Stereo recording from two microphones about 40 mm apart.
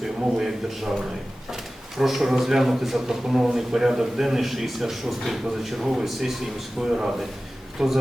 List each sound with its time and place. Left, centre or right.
0.0 s a man's voice: centre
2.0 s a man's voice: centre
6.8 s a man's voice: centre
7.8 s a man's voice: centre